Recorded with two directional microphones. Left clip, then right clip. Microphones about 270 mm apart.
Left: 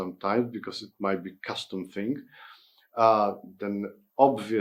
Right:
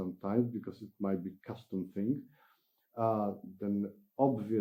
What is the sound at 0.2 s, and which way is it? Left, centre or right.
Speech, centre.